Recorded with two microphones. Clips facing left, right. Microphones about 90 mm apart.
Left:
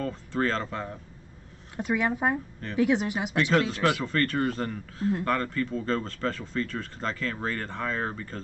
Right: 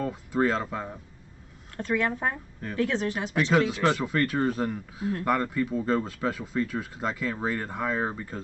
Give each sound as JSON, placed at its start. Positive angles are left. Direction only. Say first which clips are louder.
{"t": 0.0, "sound": "speech", "louder": "right 2 dB", "side_deg": -10}
{"t": 1.8, "sound": "speech", "louder": "left 1 dB", "side_deg": 15}
{"t": 3.5, "sound": "speech", "louder": "right 2 dB", "side_deg": -5}